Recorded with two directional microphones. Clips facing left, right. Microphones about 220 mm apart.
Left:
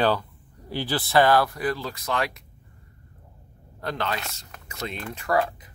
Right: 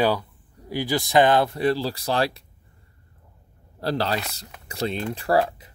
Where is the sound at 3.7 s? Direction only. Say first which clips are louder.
Right 5 dB; 35° right (ahead or behind).